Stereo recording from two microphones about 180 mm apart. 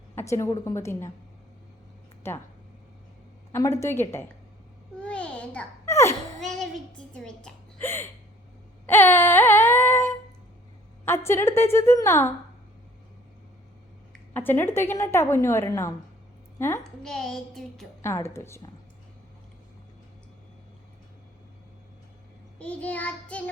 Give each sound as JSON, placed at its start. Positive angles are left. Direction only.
{"t": 0.2, "sound": "a woman's voice", "side_deg": 15}
{"t": 3.5, "sound": "a woman's voice", "side_deg": 15}
{"t": 5.0, "sound": "babbling", "side_deg": 5}
{"t": 7.1, "sound": "a woman's voice", "side_deg": 5}
{"t": 8.9, "sound": "a sound", "side_deg": 10}
{"t": 11.3, "sound": "a woman's voice", "side_deg": 15}
{"t": 14.1, "sound": "a woman's voice", "side_deg": 10}
{"t": 17.0, "sound": "music", "side_deg": 5}
{"t": 18.0, "sound": "a woman's voice", "side_deg": 15}
{"t": 22.5, "sound": "a woman's voice", "side_deg": 5}